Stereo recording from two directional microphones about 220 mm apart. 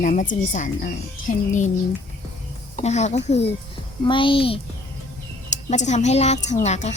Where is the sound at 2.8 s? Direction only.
30° left (ahead or behind).